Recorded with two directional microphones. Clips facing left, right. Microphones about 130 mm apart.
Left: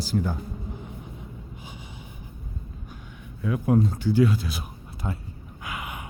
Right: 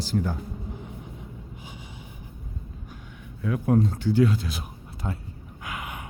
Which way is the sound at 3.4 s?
10° left (ahead or behind).